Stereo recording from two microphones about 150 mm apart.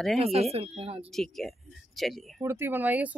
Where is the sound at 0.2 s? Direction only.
45° right (ahead or behind).